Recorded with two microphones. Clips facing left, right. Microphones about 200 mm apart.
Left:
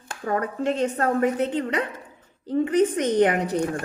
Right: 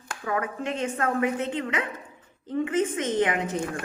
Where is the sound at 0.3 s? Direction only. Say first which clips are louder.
Left 4 dB; 35° left (ahead or behind).